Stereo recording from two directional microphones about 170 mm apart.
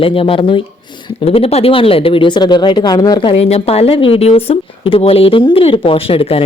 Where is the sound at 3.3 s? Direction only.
35° left (ahead or behind).